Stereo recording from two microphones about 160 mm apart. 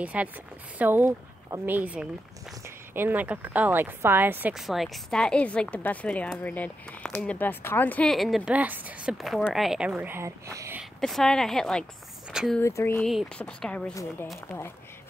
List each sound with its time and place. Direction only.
0.0 s a woman's voice: 10° right (ahead or behind)
10.8 s a woman's voice: centre (ahead or behind)
12.5 s speech: 15° left (ahead or behind)
13.0 s speech: centre (ahead or behind)